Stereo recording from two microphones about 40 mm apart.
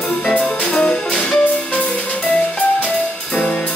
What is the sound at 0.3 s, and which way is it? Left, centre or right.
Music, left.